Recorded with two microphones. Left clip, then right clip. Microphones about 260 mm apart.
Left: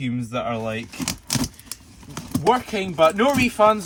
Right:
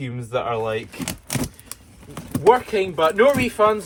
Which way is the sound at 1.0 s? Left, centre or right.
Centre.